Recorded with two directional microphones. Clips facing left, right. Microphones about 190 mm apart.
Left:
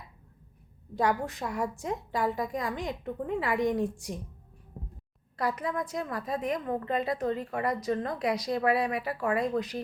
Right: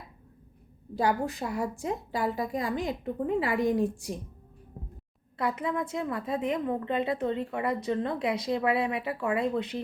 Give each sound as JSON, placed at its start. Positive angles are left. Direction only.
{"t": 0.9, "sound": "a woman's voice", "side_deg": -30}
{"t": 5.4, "sound": "a woman's voice", "side_deg": -25}